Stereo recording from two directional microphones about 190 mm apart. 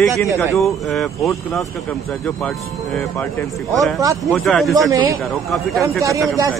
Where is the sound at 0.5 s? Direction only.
Centre (ahead or behind).